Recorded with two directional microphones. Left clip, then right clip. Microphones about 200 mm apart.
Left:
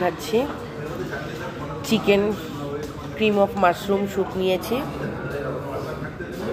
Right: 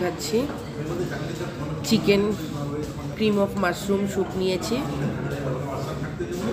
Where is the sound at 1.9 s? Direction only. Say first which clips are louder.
Left 1 dB; 10° right (ahead or behind).